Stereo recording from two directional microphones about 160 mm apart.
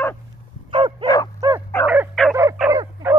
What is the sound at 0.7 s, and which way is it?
Bow-wow, 30° right (ahead or behind).